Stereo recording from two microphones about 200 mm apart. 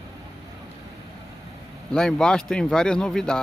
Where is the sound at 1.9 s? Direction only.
5° left (ahead or behind).